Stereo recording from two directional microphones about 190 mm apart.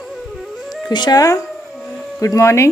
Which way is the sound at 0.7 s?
20° left (ahead or behind).